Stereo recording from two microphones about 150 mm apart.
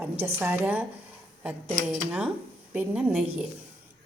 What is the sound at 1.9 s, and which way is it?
A woman's voice, 10° right (ahead or behind).